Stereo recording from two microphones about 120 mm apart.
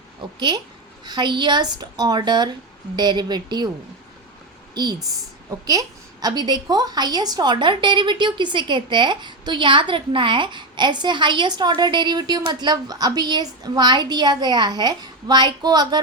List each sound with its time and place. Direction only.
0.3 s a woman's voice: 40° right (ahead or behind)
4.7 s a woman's voice: 35° right (ahead or behind)